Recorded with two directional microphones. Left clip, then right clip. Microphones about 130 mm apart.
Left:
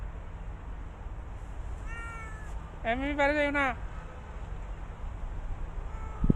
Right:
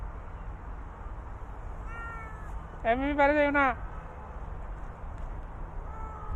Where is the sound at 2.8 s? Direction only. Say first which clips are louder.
Right 3 dB; 40° right (ahead or behind).